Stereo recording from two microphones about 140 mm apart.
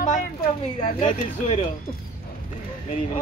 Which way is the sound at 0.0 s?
65° left (ahead or behind).